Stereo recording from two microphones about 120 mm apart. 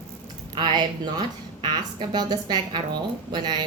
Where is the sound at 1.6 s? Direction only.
35° right (ahead or behind).